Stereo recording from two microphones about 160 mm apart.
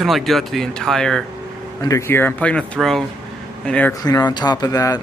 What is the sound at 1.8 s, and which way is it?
Speech, 15° left (ahead or behind).